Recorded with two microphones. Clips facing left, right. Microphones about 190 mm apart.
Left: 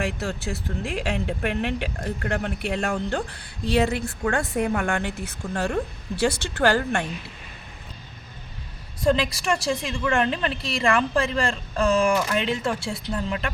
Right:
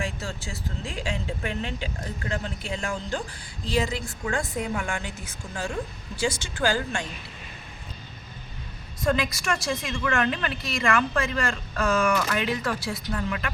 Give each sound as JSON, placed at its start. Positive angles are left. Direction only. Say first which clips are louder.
{"t": 0.0, "sound": "speech", "louder": "left 5 dB", "side_deg": 65}
{"t": 9.0, "sound": "a woman's voice", "louder": "left 4 dB", "side_deg": 30}